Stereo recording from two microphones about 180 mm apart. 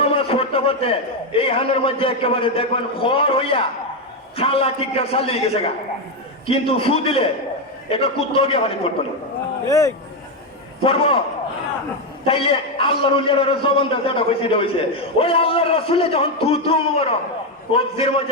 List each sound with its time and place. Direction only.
0.0 s a man's voice: 30° left (ahead or behind)
9.6 s speech: 20° left (ahead or behind)
10.8 s a man's voice: 30° left (ahead or behind)
12.2 s a man's voice: 30° left (ahead or behind)